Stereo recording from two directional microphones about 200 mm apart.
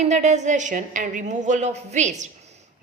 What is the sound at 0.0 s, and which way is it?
A woman's voice, 35° right (ahead or behind).